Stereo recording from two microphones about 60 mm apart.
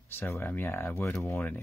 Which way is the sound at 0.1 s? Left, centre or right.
Left.